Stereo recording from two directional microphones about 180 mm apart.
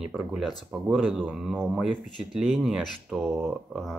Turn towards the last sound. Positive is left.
turn(degrees=0)  # may be behind; listen again after turning